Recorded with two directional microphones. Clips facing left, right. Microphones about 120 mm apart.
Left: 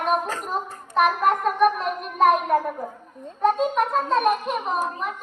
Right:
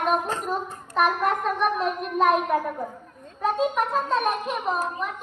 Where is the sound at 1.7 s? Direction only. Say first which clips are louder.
Left 1 dB; centre (ahead or behind).